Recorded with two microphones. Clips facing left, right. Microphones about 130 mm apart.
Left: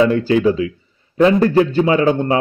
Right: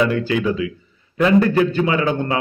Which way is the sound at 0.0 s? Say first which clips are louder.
Left 5 dB; 35° left (ahead or behind).